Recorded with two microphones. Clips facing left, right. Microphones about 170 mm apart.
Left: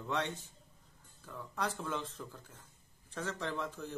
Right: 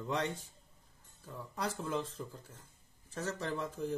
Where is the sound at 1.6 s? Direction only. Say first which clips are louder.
Right 1 dB; 10° right (ahead or behind).